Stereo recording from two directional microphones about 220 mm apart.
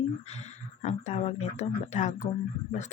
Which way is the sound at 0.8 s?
30° left (ahead or behind).